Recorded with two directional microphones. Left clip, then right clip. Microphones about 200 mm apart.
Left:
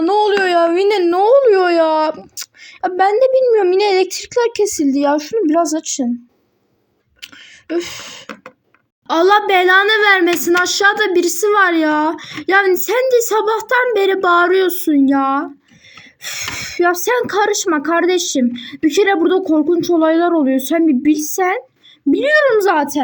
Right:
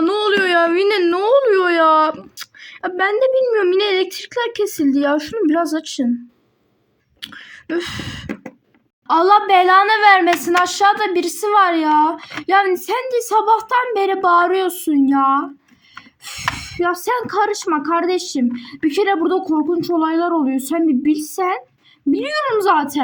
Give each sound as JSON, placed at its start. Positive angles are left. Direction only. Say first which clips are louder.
{"t": 0.0, "sound": "speech", "louder": "left 3 dB", "side_deg": 0}
{"t": 7.2, "sound": "speech", "louder": "right 2 dB", "side_deg": 5}
{"t": 9.1, "sound": "a woman's voice", "louder": "even", "side_deg": -40}
{"t": 9.6, "sound": "a woman's voice", "louder": "left 1 dB", "side_deg": 10}
{"t": 16.4, "sound": "a woman's voice", "louder": "left 3 dB", "side_deg": 10}
{"t": 22.6, "sound": "a woman's voice", "louder": "left 1 dB", "side_deg": -45}